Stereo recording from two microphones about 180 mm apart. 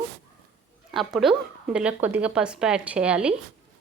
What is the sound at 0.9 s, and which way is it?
Speech, centre (ahead or behind).